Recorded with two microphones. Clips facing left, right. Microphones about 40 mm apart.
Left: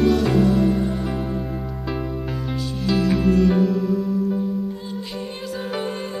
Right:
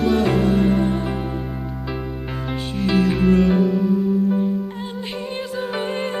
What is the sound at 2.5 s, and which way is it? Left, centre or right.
Music, right.